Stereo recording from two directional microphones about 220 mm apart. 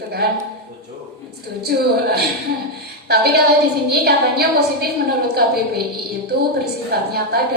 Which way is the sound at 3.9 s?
45° right (ahead or behind).